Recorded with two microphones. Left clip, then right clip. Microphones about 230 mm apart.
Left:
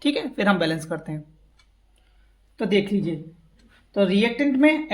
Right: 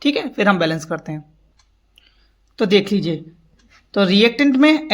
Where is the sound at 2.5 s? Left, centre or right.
Right.